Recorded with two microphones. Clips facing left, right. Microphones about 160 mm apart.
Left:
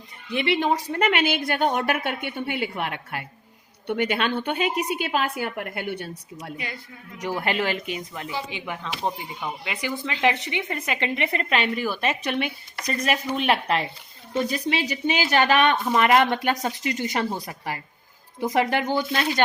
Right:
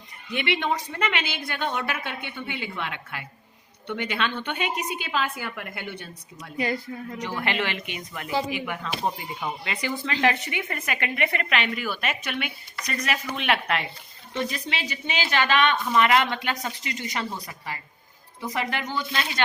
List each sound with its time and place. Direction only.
0.3 s a woman's voice: 35° left (ahead or behind)
6.6 s a woman's voice: 40° right (ahead or behind)
7.2 s a woman's voice: 40° left (ahead or behind)
9.6 s a woman's voice: 15° left (ahead or behind); by 19.2 s 55° left (ahead or behind)